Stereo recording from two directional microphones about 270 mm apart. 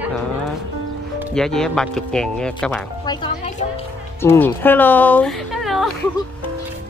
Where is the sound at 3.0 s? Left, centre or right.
Centre.